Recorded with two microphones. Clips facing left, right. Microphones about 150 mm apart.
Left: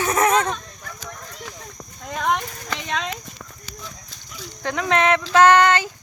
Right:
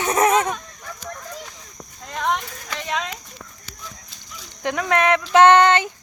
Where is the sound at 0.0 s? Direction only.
20° right (ahead or behind).